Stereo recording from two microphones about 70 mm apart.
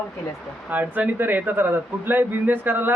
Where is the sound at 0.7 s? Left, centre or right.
Right.